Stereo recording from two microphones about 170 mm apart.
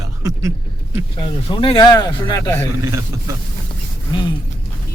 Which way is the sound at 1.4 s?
30° left (ahead or behind).